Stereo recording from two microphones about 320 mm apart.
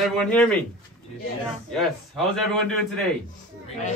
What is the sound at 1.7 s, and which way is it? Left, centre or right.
A man's voice, centre.